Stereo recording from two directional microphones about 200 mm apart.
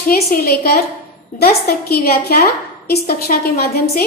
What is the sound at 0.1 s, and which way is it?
A woman's voice, 50° left (ahead or behind).